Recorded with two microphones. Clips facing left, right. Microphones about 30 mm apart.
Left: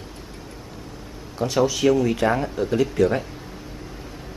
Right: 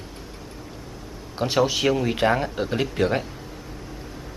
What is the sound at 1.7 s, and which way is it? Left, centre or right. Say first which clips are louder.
Speech: left 3 dB; right.